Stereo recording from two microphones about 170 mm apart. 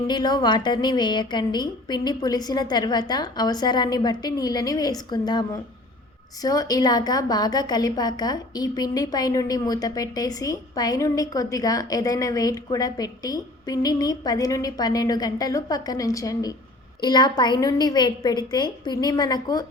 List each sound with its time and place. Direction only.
0.1 s a woman's voice: 25° left (ahead or behind)